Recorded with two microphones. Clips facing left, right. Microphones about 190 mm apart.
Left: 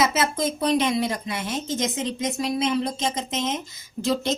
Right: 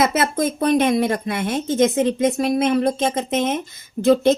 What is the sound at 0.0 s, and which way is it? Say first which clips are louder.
A woman's voice: right 4 dB; 55° right (ahead or behind).